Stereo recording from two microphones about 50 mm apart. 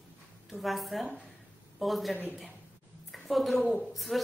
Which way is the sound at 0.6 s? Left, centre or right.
Centre.